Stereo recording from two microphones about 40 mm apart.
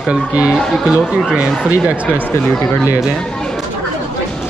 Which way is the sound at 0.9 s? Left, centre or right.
Right.